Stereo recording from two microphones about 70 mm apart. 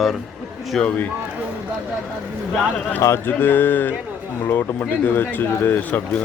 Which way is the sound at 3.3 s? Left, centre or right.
Left.